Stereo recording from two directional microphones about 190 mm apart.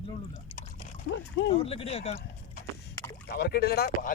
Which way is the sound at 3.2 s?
55° left (ahead or behind).